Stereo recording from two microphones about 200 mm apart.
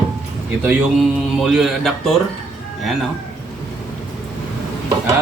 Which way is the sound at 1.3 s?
Centre (ahead or behind).